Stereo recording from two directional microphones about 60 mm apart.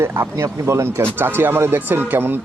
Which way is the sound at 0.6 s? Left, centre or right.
Right.